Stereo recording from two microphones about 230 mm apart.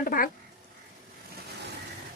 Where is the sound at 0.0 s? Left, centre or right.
Left.